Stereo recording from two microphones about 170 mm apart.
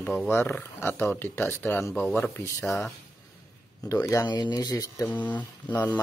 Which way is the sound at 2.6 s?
Centre (ahead or behind).